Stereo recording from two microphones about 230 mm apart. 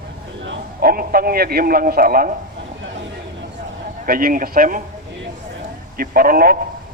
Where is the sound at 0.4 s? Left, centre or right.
Right.